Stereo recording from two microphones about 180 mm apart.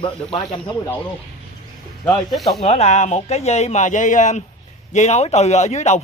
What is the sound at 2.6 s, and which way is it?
Speech, 35° left (ahead or behind).